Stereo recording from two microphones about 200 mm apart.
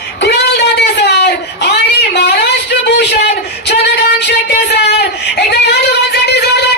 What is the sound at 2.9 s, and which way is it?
Music, 60° left (ahead or behind).